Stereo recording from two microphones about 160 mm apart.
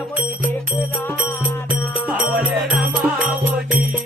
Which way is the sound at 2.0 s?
10° right (ahead or behind).